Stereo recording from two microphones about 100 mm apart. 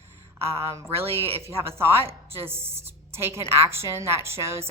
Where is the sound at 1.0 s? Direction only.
75° right (ahead or behind).